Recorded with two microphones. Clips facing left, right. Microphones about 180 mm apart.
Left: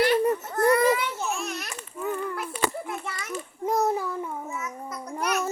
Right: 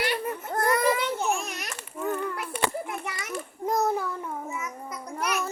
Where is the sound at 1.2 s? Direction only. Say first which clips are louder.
Right 2 dB; 15° right (ahead or behind).